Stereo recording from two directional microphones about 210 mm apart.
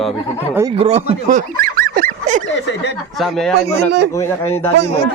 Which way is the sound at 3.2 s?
Centre (ahead or behind).